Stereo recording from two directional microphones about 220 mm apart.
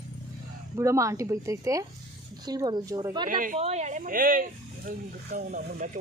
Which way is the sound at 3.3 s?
40° right (ahead or behind).